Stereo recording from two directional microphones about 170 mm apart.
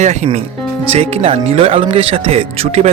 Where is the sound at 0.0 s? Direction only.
45° right (ahead or behind).